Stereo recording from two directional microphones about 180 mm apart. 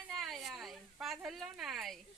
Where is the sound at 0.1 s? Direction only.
Centre (ahead or behind).